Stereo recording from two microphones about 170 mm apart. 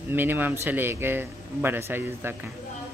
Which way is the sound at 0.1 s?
10° right (ahead or behind).